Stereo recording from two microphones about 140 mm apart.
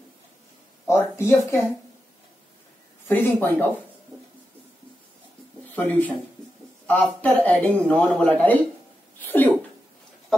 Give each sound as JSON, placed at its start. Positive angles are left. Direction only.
{"t": 0.8, "sound": "speech", "side_deg": 20}
{"t": 3.1, "sound": "speech", "side_deg": 15}
{"t": 5.8, "sound": "speech", "side_deg": 10}